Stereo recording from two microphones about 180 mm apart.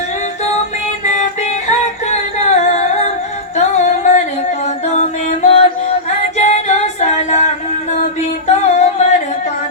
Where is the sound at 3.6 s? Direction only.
40° left (ahead or behind).